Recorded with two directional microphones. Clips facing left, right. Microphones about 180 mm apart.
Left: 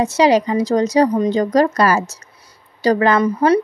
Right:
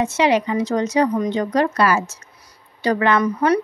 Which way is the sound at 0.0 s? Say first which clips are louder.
Left 4 dB; 35° left (ahead or behind).